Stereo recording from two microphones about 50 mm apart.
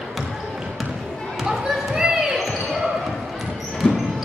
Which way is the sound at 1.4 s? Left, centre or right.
Centre.